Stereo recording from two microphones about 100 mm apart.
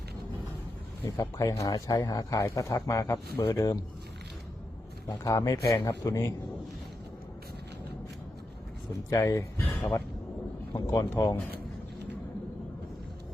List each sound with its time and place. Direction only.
1.0 s speech: 35° left (ahead or behind)
5.0 s speech: 35° left (ahead or behind)
9.0 s speech: 35° left (ahead or behind)
9.6 s speech: 15° left (ahead or behind)
10.7 s speech: 40° left (ahead or behind)